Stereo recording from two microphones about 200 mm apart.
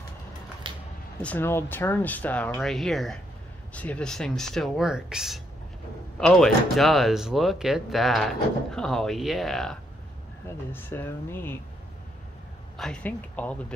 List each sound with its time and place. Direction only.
0.7 s a sound: 25° right (ahead or behind)
1.2 s speech: 10° left (ahead or behind)
12.7 s speech: 5° left (ahead or behind)